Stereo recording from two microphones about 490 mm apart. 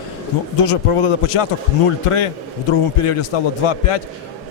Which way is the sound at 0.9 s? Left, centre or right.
Left.